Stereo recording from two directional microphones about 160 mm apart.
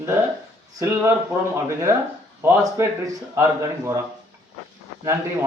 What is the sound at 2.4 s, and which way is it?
Speech, 15° right (ahead or behind).